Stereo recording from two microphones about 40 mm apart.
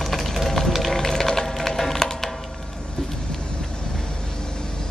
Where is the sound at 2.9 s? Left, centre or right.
Centre.